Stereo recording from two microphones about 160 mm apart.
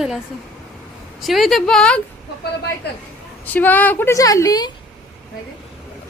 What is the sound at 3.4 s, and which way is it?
A woman's voice, 10° left (ahead or behind).